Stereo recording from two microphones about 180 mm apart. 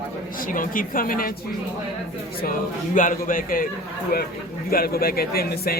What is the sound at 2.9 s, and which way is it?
Speech, 50° left (ahead or behind).